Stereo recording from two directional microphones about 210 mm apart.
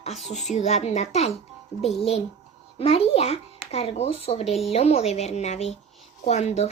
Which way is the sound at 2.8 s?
30° left (ahead or behind).